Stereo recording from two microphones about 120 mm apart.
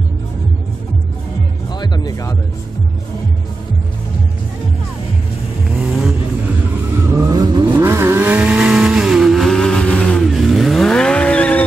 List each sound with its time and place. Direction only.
1.7 s music: 35° left (ahead or behind)
5.7 s vehicle: 5° right (ahead or behind)
7.2 s vehicle: 35° right (ahead or behind)
7.6 s vehicle: 20° right (ahead or behind); by 11.6 s 10° left (ahead or behind)